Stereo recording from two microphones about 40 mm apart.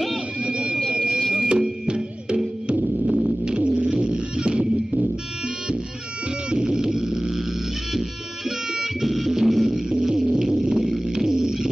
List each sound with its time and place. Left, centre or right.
0.4 s sine wave: right
1.5 s music: right
2.8 s music: centre
3.3 s music: right
6.5 s a sound: centre
8.5 s music: centre
10.3 s a sound: centre